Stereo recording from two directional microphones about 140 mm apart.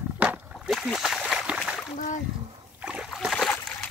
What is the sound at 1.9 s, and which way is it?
Splash, 65° left (ahead or behind).